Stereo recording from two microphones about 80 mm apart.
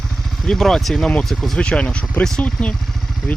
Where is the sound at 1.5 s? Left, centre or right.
Centre.